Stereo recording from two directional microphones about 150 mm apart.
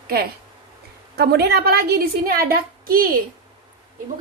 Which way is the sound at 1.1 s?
90° right.